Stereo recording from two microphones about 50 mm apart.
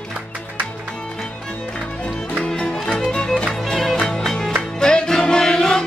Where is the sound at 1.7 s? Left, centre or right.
Centre.